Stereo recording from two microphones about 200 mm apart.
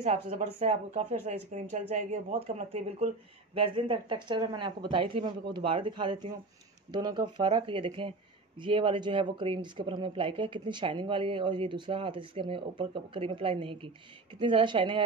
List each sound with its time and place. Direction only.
0.0 s speech: 30° right (ahead or behind)